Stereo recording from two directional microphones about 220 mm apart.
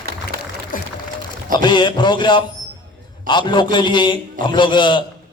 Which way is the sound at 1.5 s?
20° left (ahead or behind).